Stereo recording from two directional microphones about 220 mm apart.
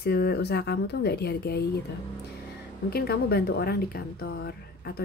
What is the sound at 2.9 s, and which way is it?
Speech, 45° left (ahead or behind).